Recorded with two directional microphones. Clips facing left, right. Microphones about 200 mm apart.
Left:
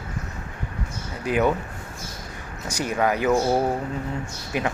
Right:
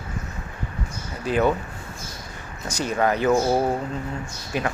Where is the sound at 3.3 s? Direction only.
5° right (ahead or behind).